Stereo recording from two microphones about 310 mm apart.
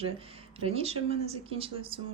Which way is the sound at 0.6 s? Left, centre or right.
Centre.